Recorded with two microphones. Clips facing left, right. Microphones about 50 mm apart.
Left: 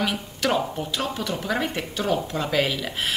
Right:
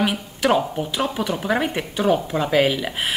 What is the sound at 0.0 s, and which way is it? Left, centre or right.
Speech, centre.